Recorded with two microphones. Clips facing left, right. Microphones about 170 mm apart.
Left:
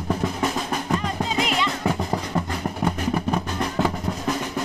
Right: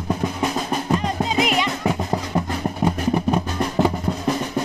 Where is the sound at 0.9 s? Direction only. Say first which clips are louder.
Right 3 dB; 15° right (ahead or behind).